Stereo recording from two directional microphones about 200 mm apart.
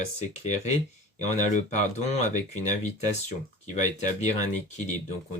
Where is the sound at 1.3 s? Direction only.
35° left (ahead or behind).